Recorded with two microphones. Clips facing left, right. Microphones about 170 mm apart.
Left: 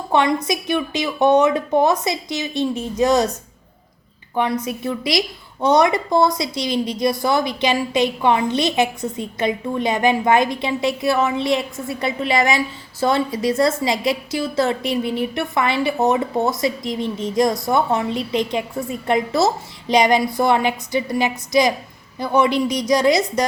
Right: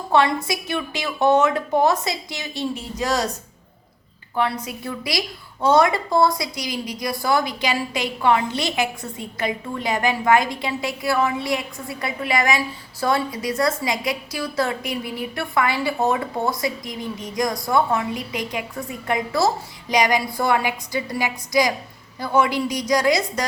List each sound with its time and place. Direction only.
0.1 s a woman's voice: 20° left (ahead or behind)
4.4 s a woman's voice: 20° left (ahead or behind)